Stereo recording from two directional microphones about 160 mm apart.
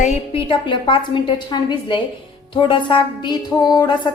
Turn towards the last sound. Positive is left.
turn(degrees=25)  # may be behind; listen again after turning